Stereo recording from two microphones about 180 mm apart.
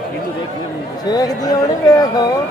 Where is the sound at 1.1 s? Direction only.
20° left (ahead or behind).